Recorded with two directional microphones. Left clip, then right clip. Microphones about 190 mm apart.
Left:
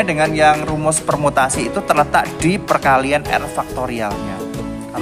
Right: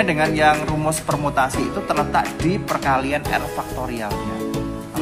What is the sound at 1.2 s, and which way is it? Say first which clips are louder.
Speech: left 4 dB; 35° left (ahead or behind).